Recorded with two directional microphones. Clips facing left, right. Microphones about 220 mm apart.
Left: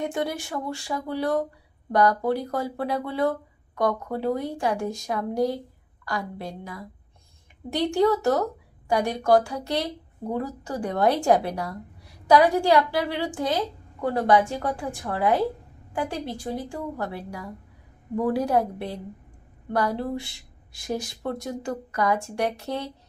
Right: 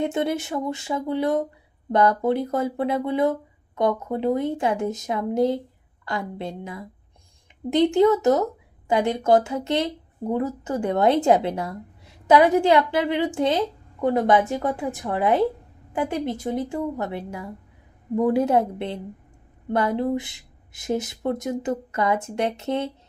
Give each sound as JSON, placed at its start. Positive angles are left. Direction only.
{"t": 0.0, "sound": "a woman's voice", "side_deg": -25}